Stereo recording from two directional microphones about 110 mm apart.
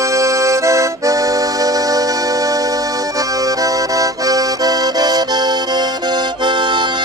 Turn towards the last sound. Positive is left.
turn(degrees=-45)  # may be behind; listen again after turning